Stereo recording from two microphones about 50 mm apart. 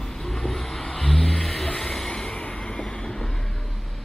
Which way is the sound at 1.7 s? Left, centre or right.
Centre.